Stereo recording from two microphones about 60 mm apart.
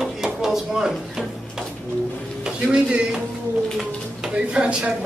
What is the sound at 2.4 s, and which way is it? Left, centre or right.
Speech, centre.